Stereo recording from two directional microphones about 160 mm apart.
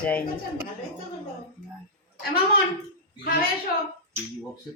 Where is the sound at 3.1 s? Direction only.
75° left (ahead or behind).